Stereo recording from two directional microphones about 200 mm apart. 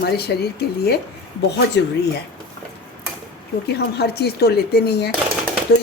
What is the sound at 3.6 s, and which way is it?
A woman's voice, 55° left (ahead or behind).